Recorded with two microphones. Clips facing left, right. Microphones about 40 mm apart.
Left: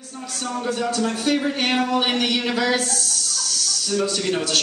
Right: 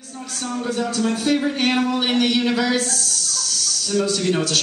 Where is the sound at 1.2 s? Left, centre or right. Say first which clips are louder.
Right 2 dB; centre.